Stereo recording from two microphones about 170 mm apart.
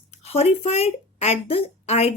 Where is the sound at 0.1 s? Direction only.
35° left (ahead or behind).